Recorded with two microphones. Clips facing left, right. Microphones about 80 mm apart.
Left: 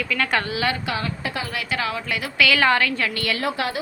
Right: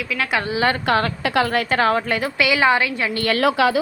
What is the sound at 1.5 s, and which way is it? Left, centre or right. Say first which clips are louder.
Speech: right 8 dB; right.